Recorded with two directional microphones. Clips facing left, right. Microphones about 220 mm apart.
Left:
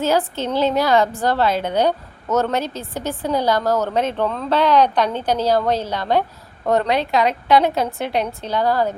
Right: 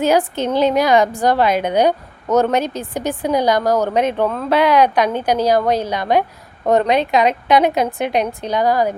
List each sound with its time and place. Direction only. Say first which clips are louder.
0.0 s speech: right 3 dB; 15° right (ahead or behind)